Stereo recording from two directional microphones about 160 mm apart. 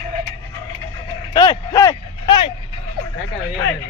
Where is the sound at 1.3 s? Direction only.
25° left (ahead or behind).